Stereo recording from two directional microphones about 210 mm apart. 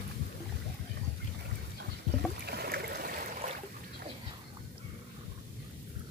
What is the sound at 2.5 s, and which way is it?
Stream, 50° right (ahead or behind).